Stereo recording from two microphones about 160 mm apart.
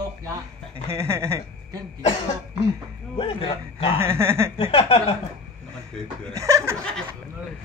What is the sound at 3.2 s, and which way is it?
Speech, 35° left (ahead or behind).